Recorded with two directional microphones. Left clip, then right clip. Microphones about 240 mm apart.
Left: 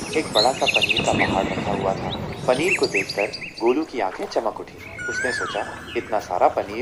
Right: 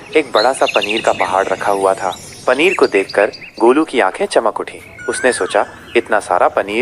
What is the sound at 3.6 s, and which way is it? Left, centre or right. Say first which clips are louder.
Speech: right 10 dB; centre.